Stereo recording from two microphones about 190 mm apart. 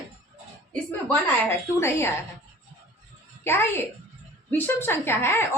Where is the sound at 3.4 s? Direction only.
10° left (ahead or behind).